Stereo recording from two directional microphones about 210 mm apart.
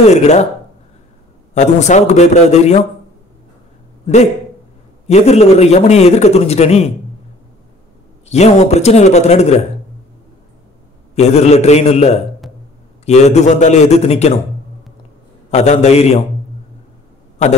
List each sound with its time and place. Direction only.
0.0 s a man's voice: 30° left (ahead or behind)
1.5 s a man's voice: 35° left (ahead or behind)
5.0 s a man's voice: 30° left (ahead or behind)
8.3 s a man's voice: 30° left (ahead or behind)
11.1 s a man's voice: 30° left (ahead or behind)
15.5 s a man's voice: 30° left (ahead or behind)